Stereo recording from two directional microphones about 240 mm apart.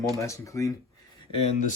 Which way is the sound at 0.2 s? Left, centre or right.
Centre.